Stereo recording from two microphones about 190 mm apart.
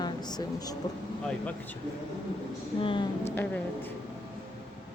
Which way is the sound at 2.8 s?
25° left (ahead or behind).